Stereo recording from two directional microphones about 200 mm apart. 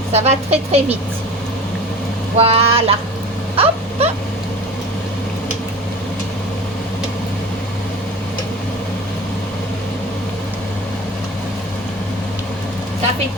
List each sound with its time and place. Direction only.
0.1 s speech: 30° right (ahead or behind)
2.4 s speech: 30° right (ahead or behind)
3.5 s vehicle: 30° right (ahead or behind)